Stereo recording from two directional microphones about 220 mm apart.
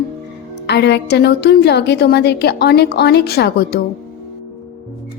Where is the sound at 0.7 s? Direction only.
50° left (ahead or behind).